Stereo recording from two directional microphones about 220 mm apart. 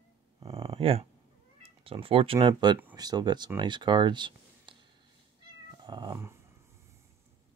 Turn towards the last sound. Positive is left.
turn(degrees=-10)  # may be behind; listen again after turning